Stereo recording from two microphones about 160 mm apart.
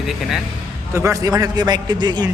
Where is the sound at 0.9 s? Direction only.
20° right (ahead or behind).